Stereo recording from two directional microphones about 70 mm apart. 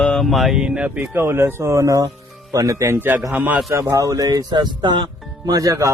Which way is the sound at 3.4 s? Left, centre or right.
Centre.